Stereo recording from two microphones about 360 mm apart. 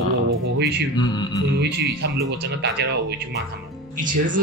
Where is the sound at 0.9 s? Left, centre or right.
Centre.